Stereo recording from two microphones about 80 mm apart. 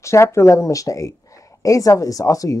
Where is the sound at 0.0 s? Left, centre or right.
Left.